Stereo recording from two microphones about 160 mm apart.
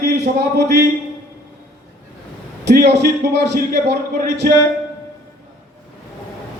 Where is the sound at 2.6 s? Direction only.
90° right.